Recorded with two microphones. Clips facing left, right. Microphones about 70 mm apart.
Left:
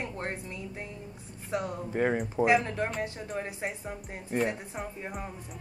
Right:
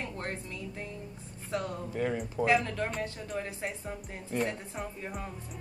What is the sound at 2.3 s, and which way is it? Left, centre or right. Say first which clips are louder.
Speech: left 1 dB; left.